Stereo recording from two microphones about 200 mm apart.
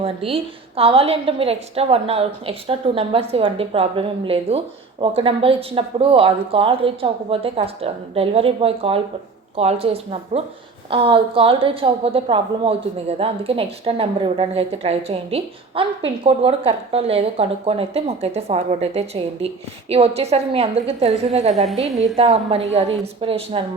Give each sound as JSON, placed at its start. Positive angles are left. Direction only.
{"t": 0.0, "sound": "a woman's voice", "side_deg": -30}